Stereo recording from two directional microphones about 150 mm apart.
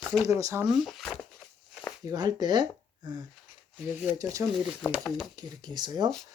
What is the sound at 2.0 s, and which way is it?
Speech, 25° right (ahead or behind).